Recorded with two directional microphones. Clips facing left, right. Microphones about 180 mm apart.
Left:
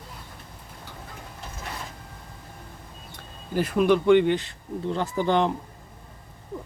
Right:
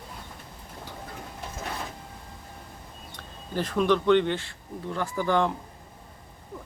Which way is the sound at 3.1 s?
10° left (ahead or behind).